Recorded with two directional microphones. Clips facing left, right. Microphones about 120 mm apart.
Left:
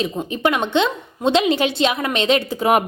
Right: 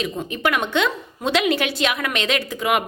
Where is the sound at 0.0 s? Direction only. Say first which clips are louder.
Left 3 dB; 30° left (ahead or behind).